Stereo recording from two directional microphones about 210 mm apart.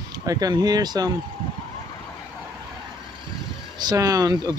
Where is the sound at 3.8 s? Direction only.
20° right (ahead or behind).